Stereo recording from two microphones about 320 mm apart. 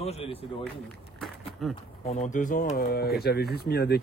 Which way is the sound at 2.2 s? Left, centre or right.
Left.